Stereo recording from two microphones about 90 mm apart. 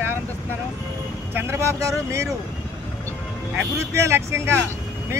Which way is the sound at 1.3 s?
30° right (ahead or behind).